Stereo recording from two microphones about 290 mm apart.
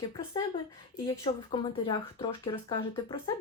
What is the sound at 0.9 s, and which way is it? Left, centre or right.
Speech, centre.